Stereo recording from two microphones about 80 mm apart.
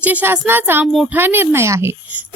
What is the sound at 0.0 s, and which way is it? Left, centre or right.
A woman's voice, centre.